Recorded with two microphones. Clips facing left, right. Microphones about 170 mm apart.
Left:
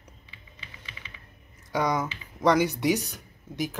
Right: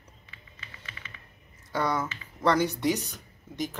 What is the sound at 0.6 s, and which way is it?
Typing, 15° left (ahead or behind).